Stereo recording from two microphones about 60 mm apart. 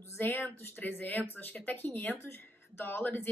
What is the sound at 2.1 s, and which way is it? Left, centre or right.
Speech, left.